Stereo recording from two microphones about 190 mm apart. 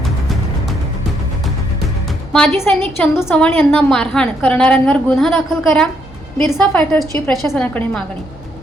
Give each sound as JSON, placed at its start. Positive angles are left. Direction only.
{"t": 2.3, "sound": "a woman's voice", "side_deg": 10}